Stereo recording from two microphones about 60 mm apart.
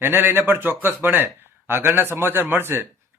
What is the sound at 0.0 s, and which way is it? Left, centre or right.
Speech, right.